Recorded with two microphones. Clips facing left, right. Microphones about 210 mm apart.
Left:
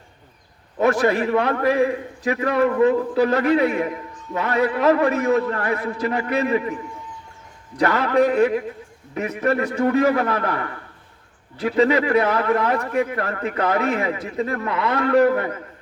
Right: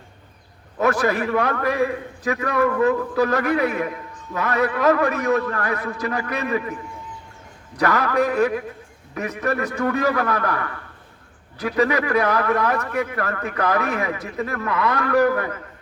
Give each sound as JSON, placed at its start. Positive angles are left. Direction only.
{"t": 0.8, "sound": "a man's voice", "side_deg": 25}
{"t": 7.8, "sound": "a man's voice", "side_deg": 25}